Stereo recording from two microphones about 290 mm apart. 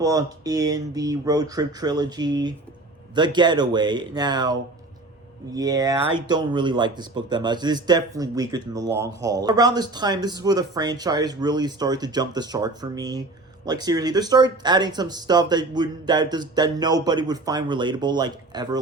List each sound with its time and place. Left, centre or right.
0.0 s speech: centre
5.5 s speech: centre